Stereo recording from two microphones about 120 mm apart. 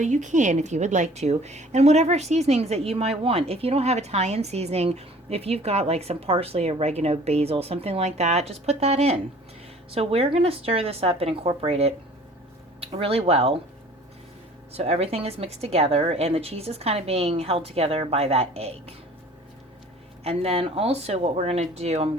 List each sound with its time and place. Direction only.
0.0 s a woman's voice: 90° right; by 13.6 s 55° right (ahead or behind)
14.7 s a woman's voice: 60° right (ahead or behind)
20.2 s a woman's voice: 55° right (ahead or behind)